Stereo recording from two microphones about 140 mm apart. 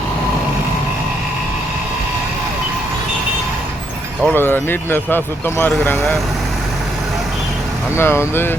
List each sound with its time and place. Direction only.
4.4 s speech: 15° left (ahead or behind)
7.9 s speech: 20° left (ahead or behind)